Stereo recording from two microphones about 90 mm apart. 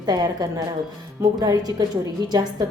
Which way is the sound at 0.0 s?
45° right (ahead or behind).